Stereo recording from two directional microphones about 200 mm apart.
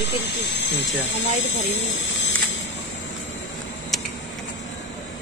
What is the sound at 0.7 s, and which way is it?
Speech, 65° left (ahead or behind).